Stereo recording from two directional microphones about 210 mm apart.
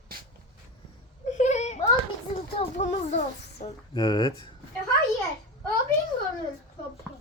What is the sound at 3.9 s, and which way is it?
Speech, 20° left (ahead or behind).